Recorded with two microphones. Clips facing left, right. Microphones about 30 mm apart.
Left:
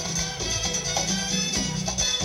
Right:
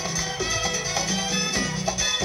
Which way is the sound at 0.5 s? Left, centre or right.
Right.